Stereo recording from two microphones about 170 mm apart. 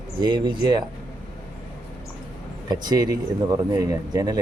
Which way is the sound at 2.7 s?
20° right (ahead or behind).